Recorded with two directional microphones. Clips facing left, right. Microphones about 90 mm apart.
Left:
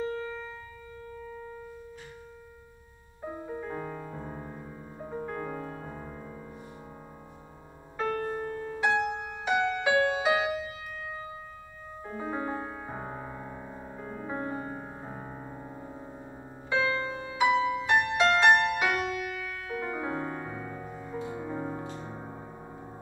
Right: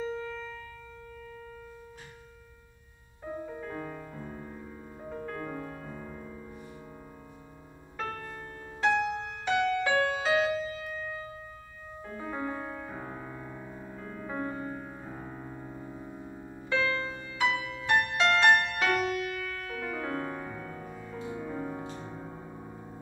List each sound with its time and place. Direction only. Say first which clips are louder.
0.0 s music: left 2 dB; 15° left (ahead or behind)
1.1 s a sound: left 5 dB; 20° left (ahead or behind)
3.2 s music: left 1 dB; 20° left (ahead or behind)
8.0 s music: left 7 dB; 20° left (ahead or behind)
16.6 s music: left 1 dB; 20° left (ahead or behind)